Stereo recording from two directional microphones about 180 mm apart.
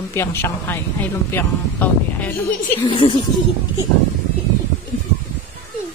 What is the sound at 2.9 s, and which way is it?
Speech, 30° left (ahead or behind).